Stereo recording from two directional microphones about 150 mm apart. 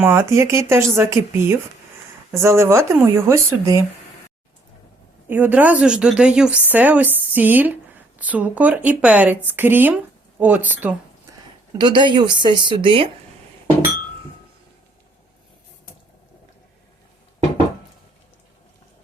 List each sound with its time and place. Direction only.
0.0 s a woman's voice: 15° right (ahead or behind)
5.3 s a woman's voice: 10° right (ahead or behind)
11.8 s a woman's voice: 30° right (ahead or behind)